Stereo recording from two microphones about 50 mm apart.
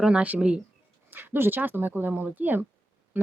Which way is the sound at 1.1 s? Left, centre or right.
Right.